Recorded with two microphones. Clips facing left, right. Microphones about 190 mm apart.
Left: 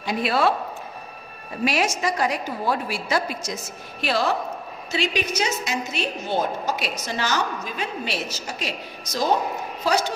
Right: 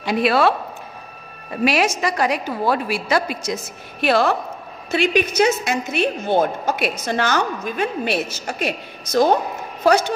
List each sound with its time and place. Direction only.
0.0 s a woman's voice: 70° right (ahead or behind)
1.6 s a woman's voice: 75° right (ahead or behind)
4.0 s a woman's voice: 60° right (ahead or behind)